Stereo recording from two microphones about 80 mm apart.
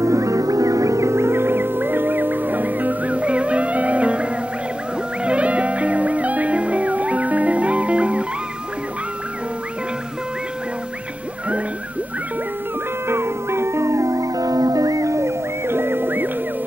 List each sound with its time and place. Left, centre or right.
0.0 s music: right; by 8.3 s centre
13.1 s music: right